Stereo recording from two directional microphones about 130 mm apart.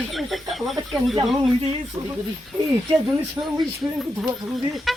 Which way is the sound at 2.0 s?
30° right (ahead or behind).